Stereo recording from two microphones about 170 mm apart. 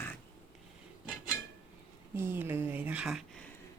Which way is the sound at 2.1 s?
15° right (ahead or behind).